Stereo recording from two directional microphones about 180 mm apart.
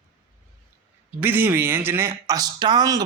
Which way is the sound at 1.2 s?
10° right (ahead or behind).